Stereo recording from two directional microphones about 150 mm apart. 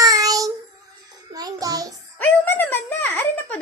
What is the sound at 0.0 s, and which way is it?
Child singing, 25° right (ahead or behind).